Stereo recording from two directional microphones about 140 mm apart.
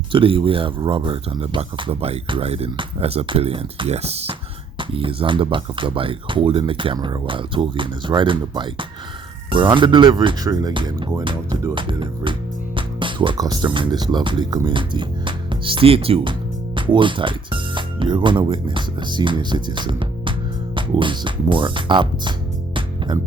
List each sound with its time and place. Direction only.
0.1 s speech: 40° right (ahead or behind)